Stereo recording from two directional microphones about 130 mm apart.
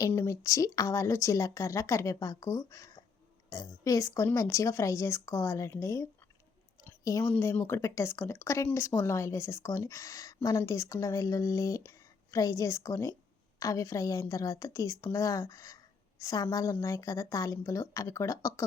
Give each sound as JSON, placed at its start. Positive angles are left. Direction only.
{"t": 0.1, "sound": "a woman's voice", "side_deg": 20}
{"t": 6.8, "sound": "a sound", "side_deg": 25}
{"t": 7.3, "sound": "a woman's voice", "side_deg": 15}